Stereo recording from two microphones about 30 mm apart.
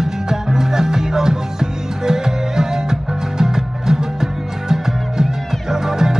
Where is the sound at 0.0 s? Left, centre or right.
Centre.